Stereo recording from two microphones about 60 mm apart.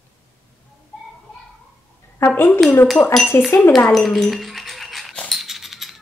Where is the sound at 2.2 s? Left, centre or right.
Left.